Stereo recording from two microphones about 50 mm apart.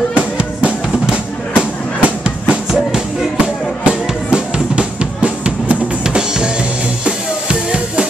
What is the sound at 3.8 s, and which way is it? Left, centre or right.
Drum, centre.